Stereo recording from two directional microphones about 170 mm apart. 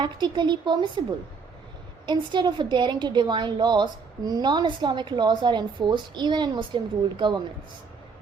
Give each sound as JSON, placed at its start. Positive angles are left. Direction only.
{"t": 0.0, "sound": "a woman's voice", "side_deg": -25}
{"t": 2.0, "sound": "a woman's voice", "side_deg": -25}